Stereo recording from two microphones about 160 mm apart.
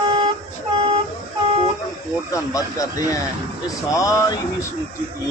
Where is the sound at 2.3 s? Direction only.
20° left (ahead or behind).